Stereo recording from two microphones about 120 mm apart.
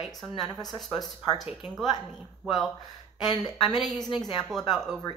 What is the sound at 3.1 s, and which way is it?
A woman's voice, 35° left (ahead or behind).